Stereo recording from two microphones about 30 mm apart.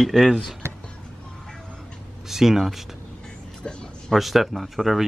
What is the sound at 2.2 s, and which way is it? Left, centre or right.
Speech, centre.